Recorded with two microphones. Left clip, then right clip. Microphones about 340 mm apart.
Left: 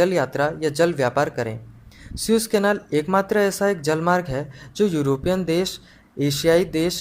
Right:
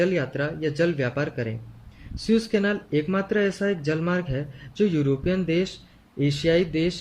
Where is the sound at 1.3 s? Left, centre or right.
Left.